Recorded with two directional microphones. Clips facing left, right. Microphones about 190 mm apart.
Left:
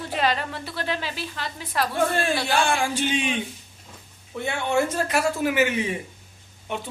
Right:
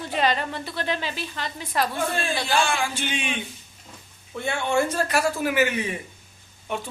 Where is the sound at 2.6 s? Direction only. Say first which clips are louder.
Left 1 dB; 55° left (ahead or behind).